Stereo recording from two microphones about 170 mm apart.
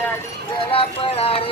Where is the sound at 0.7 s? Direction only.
35° left (ahead or behind).